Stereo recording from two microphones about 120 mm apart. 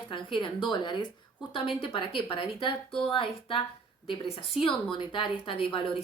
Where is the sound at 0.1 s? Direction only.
45° left (ahead or behind).